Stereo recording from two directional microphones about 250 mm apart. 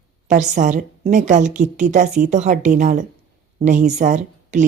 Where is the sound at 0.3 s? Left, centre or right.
Right.